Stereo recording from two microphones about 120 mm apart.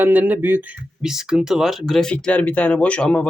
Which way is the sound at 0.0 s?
15° right (ahead or behind).